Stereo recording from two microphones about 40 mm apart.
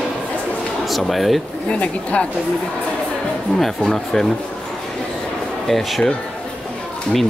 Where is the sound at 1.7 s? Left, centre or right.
Left.